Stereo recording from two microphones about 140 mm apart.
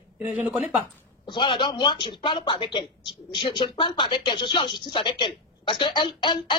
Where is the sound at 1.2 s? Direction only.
35° left (ahead or behind).